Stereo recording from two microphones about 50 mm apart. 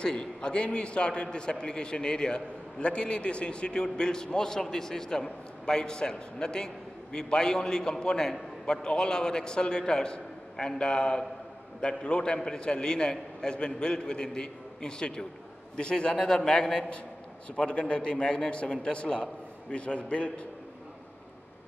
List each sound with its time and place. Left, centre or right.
0.0 s a man's voice: centre